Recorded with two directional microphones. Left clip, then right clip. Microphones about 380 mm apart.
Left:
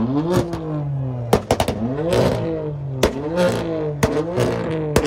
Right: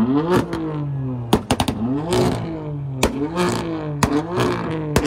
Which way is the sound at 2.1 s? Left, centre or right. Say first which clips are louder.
Left 3 dB; centre.